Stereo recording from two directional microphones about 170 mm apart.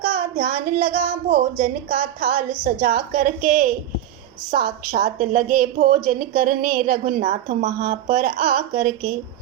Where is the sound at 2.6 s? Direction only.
60° right (ahead or behind).